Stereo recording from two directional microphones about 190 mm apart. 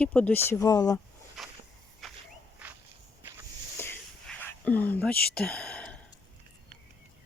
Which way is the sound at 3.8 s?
15° left (ahead or behind).